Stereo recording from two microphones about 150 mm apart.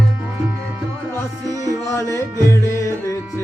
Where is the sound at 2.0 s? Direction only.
20° right (ahead or behind).